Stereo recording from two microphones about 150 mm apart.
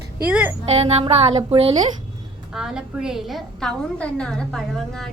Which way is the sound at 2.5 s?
5° right (ahead or behind).